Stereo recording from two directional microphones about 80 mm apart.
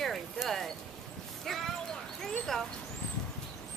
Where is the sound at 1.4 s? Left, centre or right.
Centre.